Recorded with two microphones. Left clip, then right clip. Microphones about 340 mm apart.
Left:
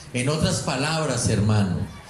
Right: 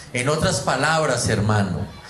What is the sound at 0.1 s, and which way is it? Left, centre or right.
Speech, right.